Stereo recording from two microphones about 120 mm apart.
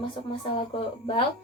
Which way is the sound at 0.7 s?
50° left (ahead or behind).